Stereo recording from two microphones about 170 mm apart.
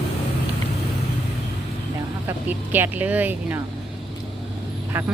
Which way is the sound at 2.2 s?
10° right (ahead or behind).